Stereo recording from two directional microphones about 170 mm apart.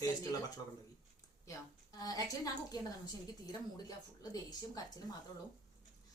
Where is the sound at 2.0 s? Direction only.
20° left (ahead or behind).